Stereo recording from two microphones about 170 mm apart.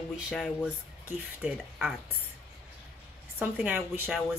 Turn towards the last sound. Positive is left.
turn(degrees=-10)  # may be behind; listen again after turning